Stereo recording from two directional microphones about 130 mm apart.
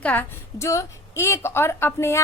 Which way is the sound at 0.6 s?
20° left (ahead or behind).